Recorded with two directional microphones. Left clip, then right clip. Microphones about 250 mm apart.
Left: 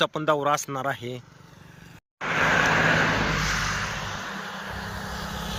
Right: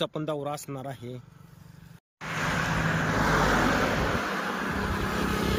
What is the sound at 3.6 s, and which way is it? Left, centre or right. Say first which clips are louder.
Vehicle: right 3 dB; right.